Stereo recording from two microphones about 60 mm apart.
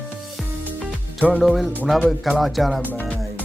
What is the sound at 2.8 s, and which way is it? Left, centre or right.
Music, left.